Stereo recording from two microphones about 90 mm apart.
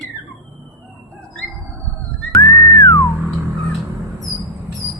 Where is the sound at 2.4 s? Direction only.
30° left (ahead or behind).